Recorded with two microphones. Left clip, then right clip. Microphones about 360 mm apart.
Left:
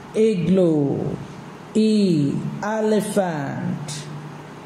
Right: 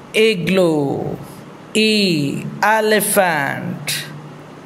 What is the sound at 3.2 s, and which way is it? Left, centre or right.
Speech, right.